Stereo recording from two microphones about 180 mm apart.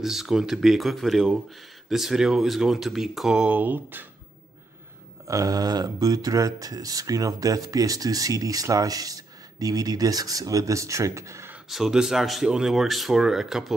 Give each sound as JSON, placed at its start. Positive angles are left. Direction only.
{"t": 0.0, "sound": "speech", "side_deg": 0}
{"t": 5.2, "sound": "speech", "side_deg": -20}
{"t": 11.7, "sound": "speech", "side_deg": -5}